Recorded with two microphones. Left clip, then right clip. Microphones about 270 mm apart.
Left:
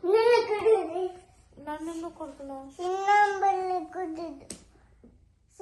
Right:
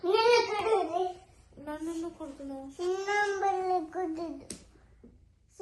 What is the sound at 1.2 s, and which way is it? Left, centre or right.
A child's voice, centre.